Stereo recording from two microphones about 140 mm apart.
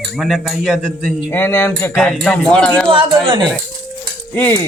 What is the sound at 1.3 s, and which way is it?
Stir, 15° left (ahead or behind).